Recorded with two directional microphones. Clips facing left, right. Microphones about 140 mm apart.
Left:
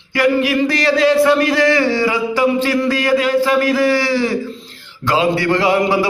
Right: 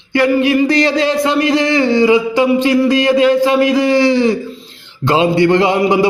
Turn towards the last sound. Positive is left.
turn(degrees=-20)  # may be behind; listen again after turning